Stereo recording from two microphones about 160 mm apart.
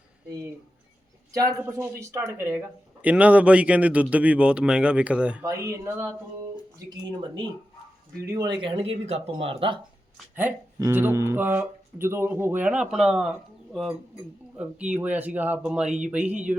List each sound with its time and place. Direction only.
0.3 s speech: 20° right (ahead or behind)
5.4 s speech: 20° right (ahead or behind)
6.7 s speech: 30° right (ahead or behind)
10.3 s speech: 15° right (ahead or behind); by 13.9 s centre (ahead or behind)
14.9 s speech: 10° right (ahead or behind)